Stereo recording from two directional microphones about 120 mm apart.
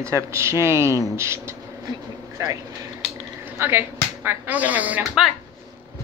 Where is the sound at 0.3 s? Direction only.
25° right (ahead or behind); by 5.3 s 10° right (ahead or behind).